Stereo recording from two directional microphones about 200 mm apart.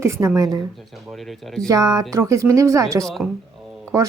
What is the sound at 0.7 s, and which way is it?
Speech, centre (ahead or behind).